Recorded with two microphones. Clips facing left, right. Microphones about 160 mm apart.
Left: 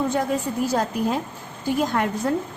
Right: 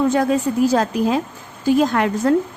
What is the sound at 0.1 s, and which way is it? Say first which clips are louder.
A woman's voice: right 6 dB; 90° right.